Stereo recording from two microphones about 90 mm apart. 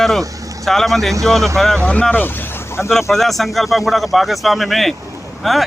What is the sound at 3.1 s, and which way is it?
Speech, centre (ahead or behind).